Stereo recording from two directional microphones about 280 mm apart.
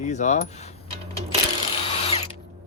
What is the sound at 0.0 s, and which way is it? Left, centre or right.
Creak, left.